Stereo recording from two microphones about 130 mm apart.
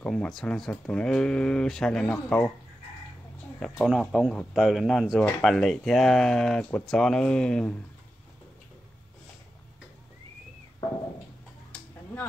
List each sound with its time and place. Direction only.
0.0 s speech: 5° left (ahead or behind)
3.5 s speech: 5° left (ahead or behind)
4.3 s speech: 10° left (ahead or behind)